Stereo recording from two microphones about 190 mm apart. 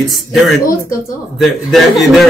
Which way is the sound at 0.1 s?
Centre (ahead or behind).